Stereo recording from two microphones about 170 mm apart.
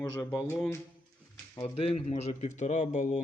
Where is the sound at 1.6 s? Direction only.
35° left (ahead or behind).